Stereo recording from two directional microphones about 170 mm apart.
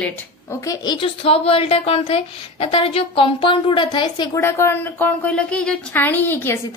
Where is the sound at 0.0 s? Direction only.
20° left (ahead or behind).